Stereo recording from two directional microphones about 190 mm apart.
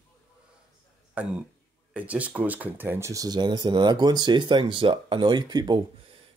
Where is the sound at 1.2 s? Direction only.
5° right (ahead or behind).